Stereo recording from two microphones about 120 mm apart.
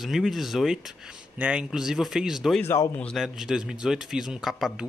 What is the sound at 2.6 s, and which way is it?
Speech, 25° left (ahead or behind).